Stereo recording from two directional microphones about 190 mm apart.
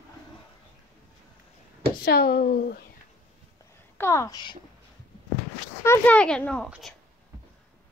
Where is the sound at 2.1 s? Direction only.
55° left (ahead or behind).